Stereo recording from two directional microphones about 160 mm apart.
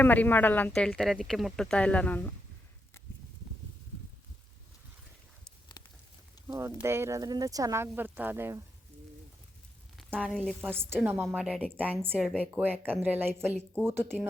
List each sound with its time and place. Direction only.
0.0 s speech: 10° left (ahead or behind)
6.5 s speech: 15° right (ahead or behind)
10.2 s a woman's voice: 5° left (ahead or behind)
10.6 s speech: 15° right (ahead or behind)
11.3 s a woman's voice: 5° right (ahead or behind)